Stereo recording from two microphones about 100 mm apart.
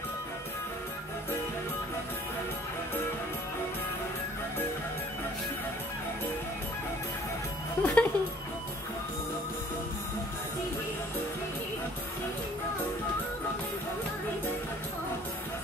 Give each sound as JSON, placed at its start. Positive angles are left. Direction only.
{"t": 7.8, "sound": "speech", "side_deg": 15}